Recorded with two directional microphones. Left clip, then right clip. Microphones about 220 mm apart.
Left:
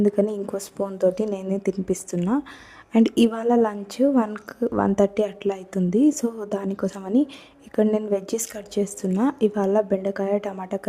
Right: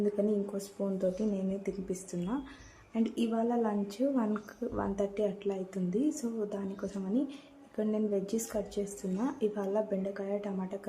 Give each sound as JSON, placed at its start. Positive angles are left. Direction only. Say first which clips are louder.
{"t": 0.0, "sound": "a woman's voice", "louder": "left 9 dB", "side_deg": 45}